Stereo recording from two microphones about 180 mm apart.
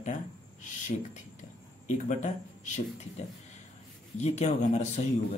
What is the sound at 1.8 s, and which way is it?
Speech, 40° left (ahead or behind).